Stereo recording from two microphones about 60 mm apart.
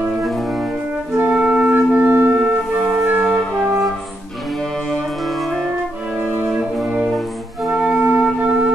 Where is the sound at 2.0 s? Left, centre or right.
Right.